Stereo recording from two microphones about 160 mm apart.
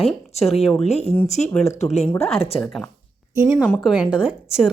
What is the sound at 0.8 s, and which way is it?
Speech, 40° left (ahead or behind).